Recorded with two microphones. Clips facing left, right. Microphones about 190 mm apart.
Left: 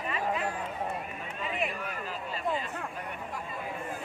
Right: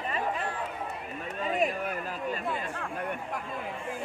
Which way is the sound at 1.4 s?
40° right (ahead or behind).